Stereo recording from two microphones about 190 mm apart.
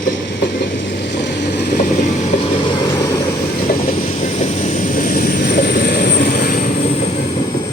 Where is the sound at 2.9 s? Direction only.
15° left (ahead or behind).